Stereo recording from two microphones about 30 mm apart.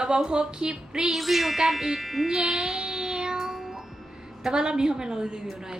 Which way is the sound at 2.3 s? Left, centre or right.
Centre.